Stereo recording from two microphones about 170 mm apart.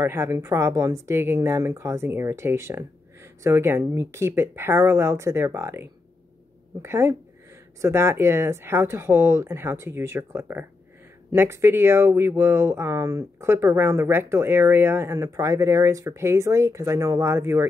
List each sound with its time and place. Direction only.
0.0 s speech: 15° right (ahead or behind)